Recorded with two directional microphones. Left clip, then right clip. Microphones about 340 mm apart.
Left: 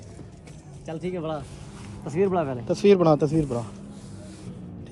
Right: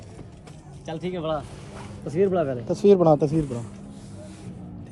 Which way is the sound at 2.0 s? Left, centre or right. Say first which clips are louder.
Right 2 dB; centre.